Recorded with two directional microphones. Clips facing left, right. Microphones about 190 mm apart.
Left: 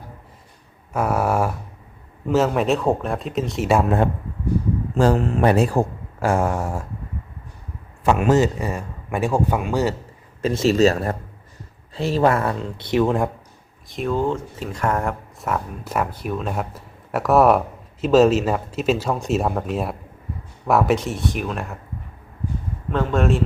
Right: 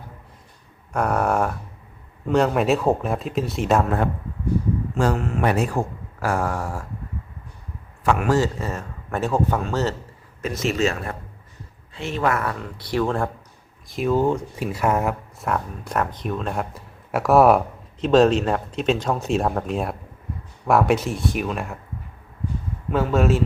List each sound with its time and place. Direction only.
0.9 s speech: 5° left (ahead or behind)
3.7 s speech: 10° left (ahead or behind)
4.9 s speech: 35° left (ahead or behind)
8.0 s speech: 20° left (ahead or behind)
10.4 s speech: 30° left (ahead or behind)
13.8 s speech: centre (ahead or behind)
22.9 s speech: 5° right (ahead or behind)